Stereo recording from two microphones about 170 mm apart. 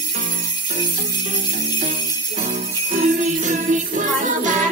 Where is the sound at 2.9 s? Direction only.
45° right (ahead or behind).